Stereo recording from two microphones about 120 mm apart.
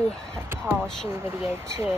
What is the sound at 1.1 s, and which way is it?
Speech, 20° right (ahead or behind).